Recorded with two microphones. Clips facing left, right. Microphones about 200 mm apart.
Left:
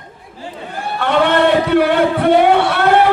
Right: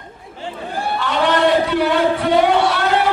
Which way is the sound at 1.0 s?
55° left (ahead or behind).